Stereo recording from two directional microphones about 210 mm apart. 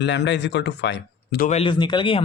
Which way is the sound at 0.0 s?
55° left (ahead or behind).